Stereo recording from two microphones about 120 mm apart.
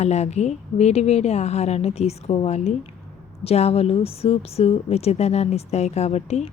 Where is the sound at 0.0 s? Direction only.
65° left (ahead or behind).